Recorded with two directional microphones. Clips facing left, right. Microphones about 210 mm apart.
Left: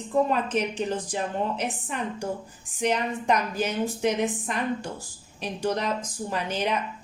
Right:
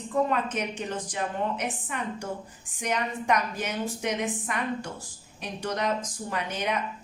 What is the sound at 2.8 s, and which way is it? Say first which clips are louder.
A woman's voice: left 3 dB; 30° left (ahead or behind).